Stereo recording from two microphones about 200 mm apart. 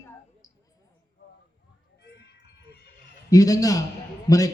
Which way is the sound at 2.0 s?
55° left (ahead or behind).